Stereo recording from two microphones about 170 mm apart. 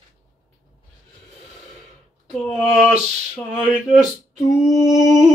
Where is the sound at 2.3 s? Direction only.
Centre (ahead or behind).